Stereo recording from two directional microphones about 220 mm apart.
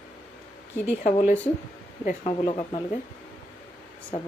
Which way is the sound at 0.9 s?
30° left (ahead or behind).